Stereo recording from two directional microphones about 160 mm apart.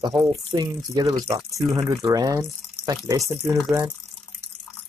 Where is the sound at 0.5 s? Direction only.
25° right (ahead or behind).